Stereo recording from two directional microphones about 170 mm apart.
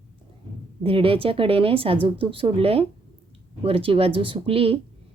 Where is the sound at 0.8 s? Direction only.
35° right (ahead or behind).